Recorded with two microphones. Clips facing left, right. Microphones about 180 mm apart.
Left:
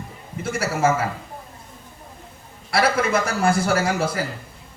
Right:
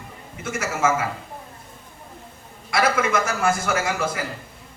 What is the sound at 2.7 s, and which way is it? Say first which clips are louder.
A man's voice: left 1 dB; 35° left (ahead or behind).